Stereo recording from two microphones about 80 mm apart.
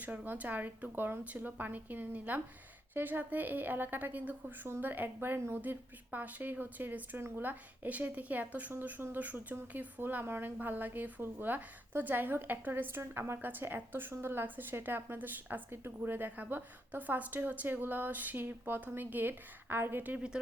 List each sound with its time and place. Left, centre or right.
0.0 s a woman's voice: centre
20.1 s speech: centre